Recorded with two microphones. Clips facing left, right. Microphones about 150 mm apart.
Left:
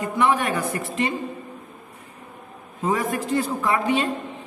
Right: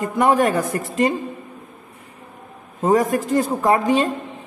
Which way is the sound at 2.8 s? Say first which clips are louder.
Right 6 dB; 45° right (ahead or behind).